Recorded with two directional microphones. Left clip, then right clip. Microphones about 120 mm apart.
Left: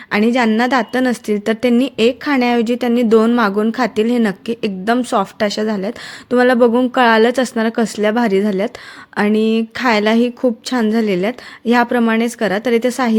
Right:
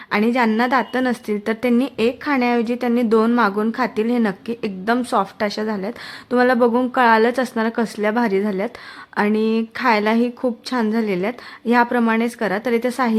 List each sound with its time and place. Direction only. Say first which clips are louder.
0.1 s a woman's voice: left 3 dB; 25° left (ahead or behind)